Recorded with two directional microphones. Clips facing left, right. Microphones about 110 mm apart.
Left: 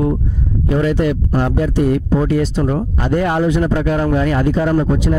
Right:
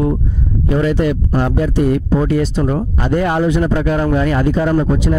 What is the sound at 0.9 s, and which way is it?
Speech, 20° right (ahead or behind).